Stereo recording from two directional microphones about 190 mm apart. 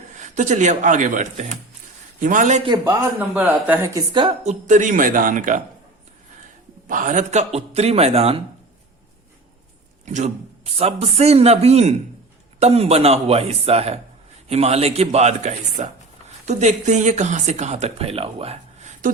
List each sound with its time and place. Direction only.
0.1 s a man's voice: 40° right (ahead or behind)
2.6 s speech: 20° right (ahead or behind)
4.4 s a man's voice: 40° right (ahead or behind)
6.8 s speech: 45° right (ahead or behind)
10.1 s speech: 40° right (ahead or behind)